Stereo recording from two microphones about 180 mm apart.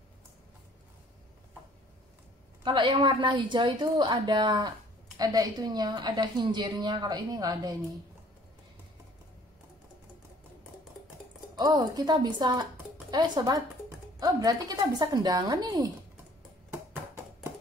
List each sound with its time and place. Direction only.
2.6 s a woman's voice: 25° right (ahead or behind)
11.5 s a woman's voice: 20° right (ahead or behind)